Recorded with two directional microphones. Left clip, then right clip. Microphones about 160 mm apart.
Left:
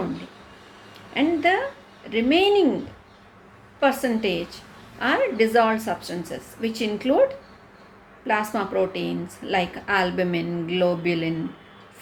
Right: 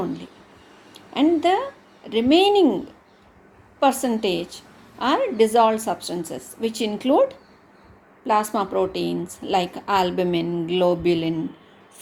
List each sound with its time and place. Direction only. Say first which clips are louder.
1.1 s a woman's voice: right 2 dB; 60° right (ahead or behind)
3.8 s a woman's voice: right 2 dB; 55° right (ahead or behind)